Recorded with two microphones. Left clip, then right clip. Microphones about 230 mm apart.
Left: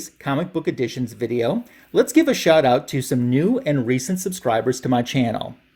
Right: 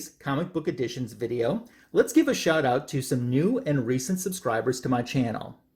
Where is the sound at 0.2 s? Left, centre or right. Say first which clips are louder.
Left 6 dB; left.